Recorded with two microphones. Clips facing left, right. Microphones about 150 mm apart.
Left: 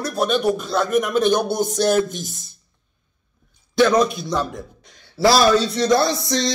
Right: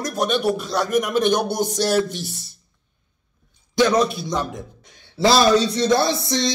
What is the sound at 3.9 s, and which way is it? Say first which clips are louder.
Speech: left 1 dB; 40° left (ahead or behind).